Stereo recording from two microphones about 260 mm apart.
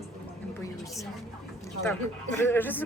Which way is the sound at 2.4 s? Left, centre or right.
Centre.